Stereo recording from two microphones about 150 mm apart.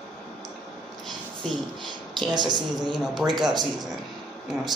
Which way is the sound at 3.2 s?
5° right (ahead or behind).